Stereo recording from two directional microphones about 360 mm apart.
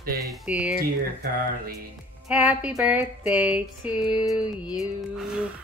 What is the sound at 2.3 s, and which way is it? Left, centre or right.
Speech, centre.